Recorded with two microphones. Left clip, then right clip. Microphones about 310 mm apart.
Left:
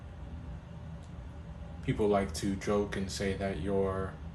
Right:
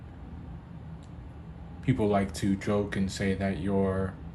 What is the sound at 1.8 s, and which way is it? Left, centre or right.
Speech, right.